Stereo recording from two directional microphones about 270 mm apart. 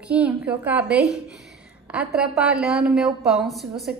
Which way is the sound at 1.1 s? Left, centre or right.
Centre.